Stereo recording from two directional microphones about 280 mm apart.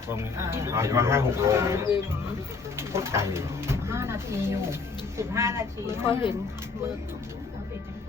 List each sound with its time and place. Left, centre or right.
0.3 s speech: centre